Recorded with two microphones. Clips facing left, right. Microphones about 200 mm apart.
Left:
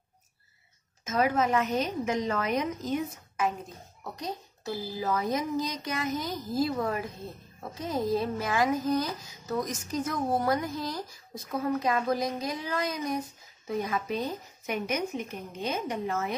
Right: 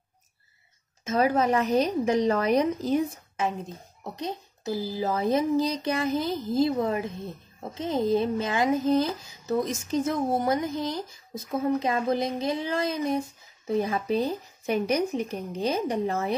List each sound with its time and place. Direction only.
1.0 s a woman's voice: 35° right (ahead or behind)